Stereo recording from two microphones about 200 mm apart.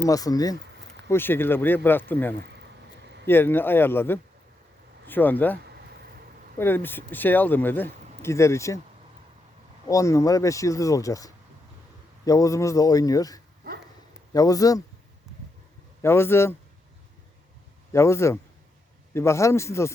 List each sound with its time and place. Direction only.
0.0 s speech: 15° left (ahead or behind)
2.4 s a sound: 55° right (ahead or behind)
3.2 s speech: 10° left (ahead or behind)
6.6 s speech: 10° left (ahead or behind)
9.9 s speech: 15° left (ahead or behind)
16.0 s speech: 10° left (ahead or behind)
17.9 s speech: 15° left (ahead or behind)